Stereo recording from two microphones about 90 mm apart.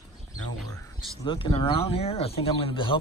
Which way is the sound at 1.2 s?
65° left (ahead or behind).